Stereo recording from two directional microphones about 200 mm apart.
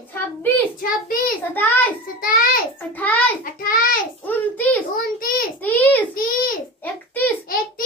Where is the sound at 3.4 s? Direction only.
45° left (ahead or behind).